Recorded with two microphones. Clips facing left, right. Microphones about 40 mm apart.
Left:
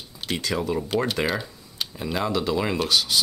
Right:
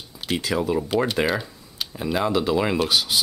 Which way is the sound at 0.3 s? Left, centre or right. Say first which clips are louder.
Right 3 dB; centre.